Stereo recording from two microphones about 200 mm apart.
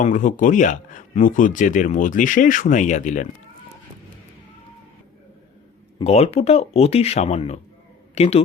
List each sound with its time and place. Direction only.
0.0 s speech: 40° left (ahead or behind)
6.0 s speech: 30° left (ahead or behind)